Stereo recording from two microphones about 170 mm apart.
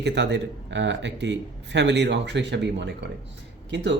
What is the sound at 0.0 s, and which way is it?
Speech, 90° right.